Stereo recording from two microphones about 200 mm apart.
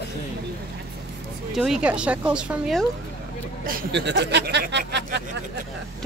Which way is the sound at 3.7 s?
55° right (ahead or behind).